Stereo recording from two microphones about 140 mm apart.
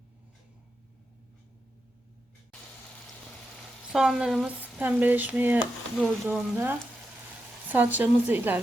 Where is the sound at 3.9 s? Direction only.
5° right (ahead or behind).